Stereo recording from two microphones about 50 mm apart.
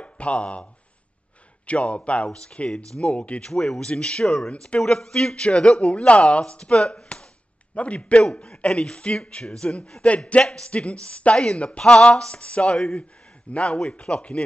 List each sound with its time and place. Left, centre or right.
0.0 s speech: left
1.7 s speech: left
3.4 s a man's voice: centre